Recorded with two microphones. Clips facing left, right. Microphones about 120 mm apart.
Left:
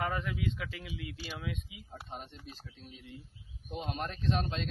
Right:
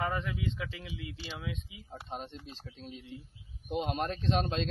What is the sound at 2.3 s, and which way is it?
Speech, 20° right (ahead or behind).